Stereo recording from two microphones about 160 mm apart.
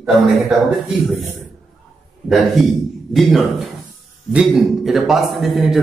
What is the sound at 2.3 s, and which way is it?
A man's voice, centre (ahead or behind).